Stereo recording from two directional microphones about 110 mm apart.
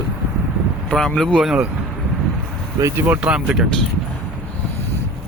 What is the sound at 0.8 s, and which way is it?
Speech, 5° left (ahead or behind).